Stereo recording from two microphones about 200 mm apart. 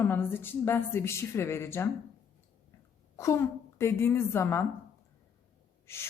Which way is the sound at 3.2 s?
15° left (ahead or behind).